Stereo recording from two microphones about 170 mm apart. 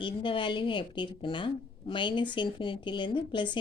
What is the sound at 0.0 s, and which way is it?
Speech, 30° left (ahead or behind).